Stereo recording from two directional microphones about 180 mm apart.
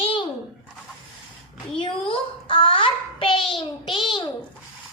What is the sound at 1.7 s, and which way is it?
Child singing, 30° left (ahead or behind).